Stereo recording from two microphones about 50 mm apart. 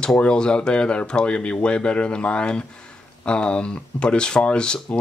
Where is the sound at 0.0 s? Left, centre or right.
Centre.